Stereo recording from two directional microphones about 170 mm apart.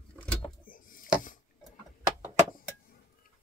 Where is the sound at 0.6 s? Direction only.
55° left (ahead or behind).